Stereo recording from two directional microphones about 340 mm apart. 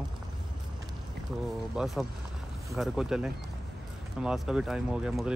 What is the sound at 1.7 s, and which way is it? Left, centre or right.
Speech, centre.